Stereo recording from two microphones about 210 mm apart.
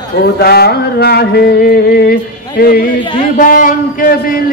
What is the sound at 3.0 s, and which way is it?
Speech, 25° left (ahead or behind).